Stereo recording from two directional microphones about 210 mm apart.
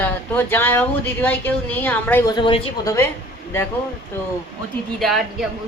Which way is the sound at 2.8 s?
10° left (ahead or behind).